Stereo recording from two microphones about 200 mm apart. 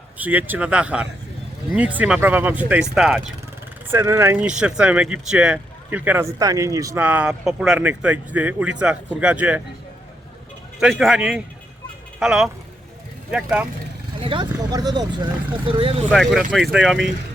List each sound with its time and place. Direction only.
0.2 s speech: 10° right (ahead or behind)
3.9 s speech: 15° right (ahead or behind)
4.4 s speech: 5° right (ahead or behind)
10.8 s speech: centre (ahead or behind)
14.2 s speech: 25° right (ahead or behind)
16.1 s speech: centre (ahead or behind)